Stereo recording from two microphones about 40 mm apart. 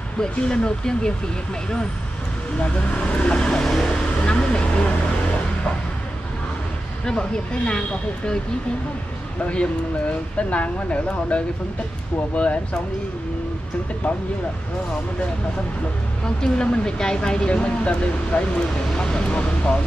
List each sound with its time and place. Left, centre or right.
0.2 s speech: centre
2.6 s speech: left
3.6 s speech: centre
4.2 s speech: left
7.1 s speech: left
10.5 s speech: left
16.3 s speech: centre
17.5 s speech: left